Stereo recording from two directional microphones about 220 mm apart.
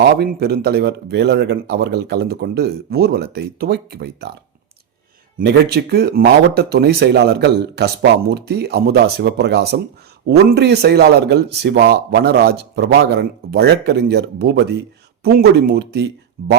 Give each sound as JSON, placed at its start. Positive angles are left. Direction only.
{"t": 0.0, "sound": "speech", "side_deg": -45}
{"t": 5.4, "sound": "speech", "side_deg": -45}